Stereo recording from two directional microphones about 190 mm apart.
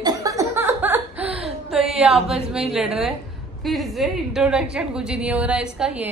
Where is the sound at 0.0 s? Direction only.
15° right (ahead or behind).